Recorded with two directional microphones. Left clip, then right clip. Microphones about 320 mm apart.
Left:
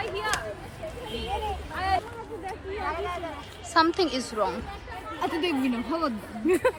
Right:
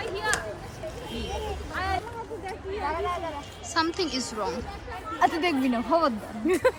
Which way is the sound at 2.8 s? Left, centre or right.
Right.